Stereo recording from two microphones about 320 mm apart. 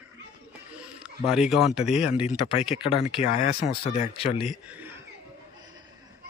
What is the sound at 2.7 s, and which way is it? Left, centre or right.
A man's voice, centre.